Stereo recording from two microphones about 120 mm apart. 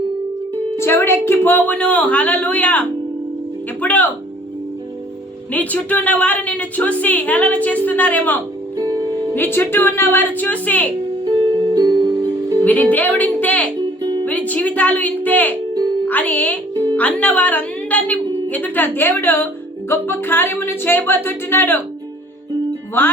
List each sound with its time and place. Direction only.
0.8 s a woman's voice: 20° left (ahead or behind)
5.5 s a woman's voice: 10° left (ahead or behind)
8.8 s music: 30° right (ahead or behind)
9.3 s a woman's voice: 15° left (ahead or behind)
11.3 s music: 35° right (ahead or behind)
12.6 s a woman's voice: 15° left (ahead or behind)
14.0 s music: 35° right (ahead or behind)
14.3 s a woman's voice: 15° left (ahead or behind)
23.0 s a woman's voice: 15° left (ahead or behind)